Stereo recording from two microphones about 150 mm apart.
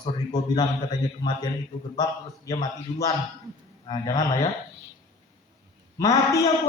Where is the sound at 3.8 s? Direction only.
25° left (ahead or behind).